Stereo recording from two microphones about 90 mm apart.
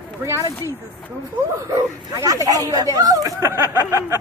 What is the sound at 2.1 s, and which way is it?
Speech, 40° right (ahead or behind).